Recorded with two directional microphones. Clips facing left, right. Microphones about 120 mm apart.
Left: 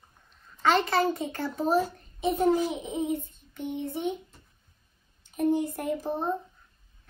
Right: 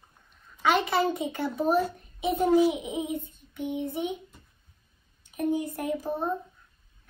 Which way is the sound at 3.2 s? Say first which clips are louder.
Right 5 dB; 55° right (ahead or behind).